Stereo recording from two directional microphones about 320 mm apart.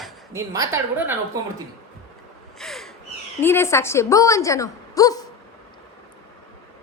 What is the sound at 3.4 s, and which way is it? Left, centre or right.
A woman's voice, centre.